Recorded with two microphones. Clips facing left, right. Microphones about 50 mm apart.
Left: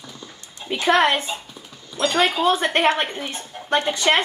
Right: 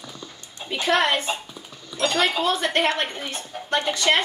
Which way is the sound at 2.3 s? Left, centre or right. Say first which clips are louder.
Left 3 dB; left.